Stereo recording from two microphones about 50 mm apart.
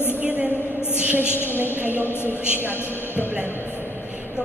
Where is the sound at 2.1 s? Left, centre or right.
Left.